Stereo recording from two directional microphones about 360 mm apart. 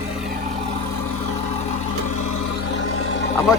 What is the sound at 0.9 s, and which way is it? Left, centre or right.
Vehicle, left.